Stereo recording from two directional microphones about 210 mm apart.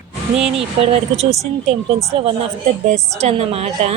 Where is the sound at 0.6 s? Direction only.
30° right (ahead or behind).